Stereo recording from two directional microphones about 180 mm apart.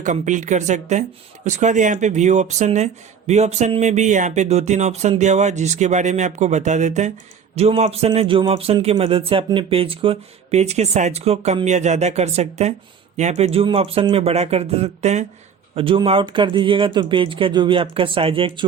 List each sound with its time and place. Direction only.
0.0 s speech: 45° right (ahead or behind)